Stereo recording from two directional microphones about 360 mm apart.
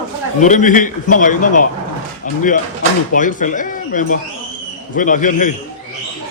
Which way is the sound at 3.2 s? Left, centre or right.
Left.